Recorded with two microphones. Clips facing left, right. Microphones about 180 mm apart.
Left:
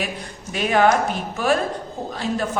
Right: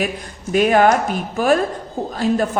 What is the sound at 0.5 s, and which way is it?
Speech, 45° right (ahead or behind).